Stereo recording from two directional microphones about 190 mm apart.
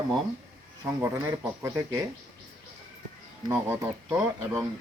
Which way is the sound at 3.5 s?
10° right (ahead or behind).